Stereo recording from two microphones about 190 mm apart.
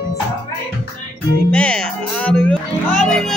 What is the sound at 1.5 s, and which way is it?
Music, 5° left (ahead or behind).